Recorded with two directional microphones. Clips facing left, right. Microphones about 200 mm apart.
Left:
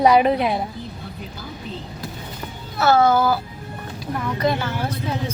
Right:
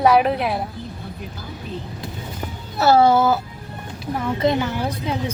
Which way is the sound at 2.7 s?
35° right (ahead or behind).